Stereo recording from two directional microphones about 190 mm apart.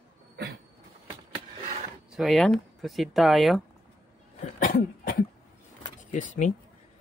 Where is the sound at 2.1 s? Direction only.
Centre (ahead or behind).